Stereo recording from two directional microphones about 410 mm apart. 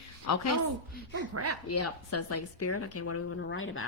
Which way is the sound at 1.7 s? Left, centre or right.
Left.